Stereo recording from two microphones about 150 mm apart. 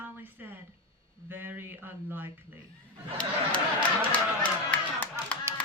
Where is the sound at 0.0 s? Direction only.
10° right (ahead or behind).